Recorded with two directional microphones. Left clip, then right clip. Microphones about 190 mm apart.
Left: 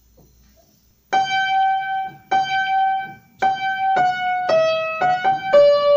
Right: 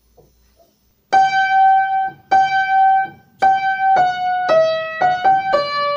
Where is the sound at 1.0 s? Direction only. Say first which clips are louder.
Right 5 dB; 35° right (ahead or behind).